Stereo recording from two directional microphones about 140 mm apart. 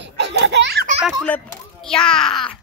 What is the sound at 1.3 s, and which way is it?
A child's voice, 10° left (ahead or behind).